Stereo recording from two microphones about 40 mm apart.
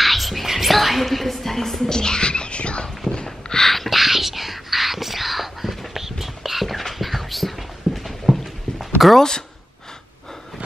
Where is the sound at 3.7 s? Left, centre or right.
Centre.